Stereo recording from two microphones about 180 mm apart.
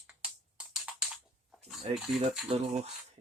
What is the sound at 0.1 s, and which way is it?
Music, 5° right (ahead or behind).